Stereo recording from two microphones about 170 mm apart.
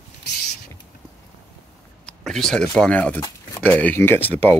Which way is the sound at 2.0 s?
5° left (ahead or behind).